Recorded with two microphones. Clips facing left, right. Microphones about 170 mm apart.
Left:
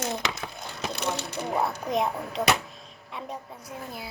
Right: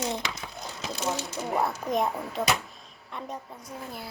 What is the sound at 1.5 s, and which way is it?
Speech, centre (ahead or behind).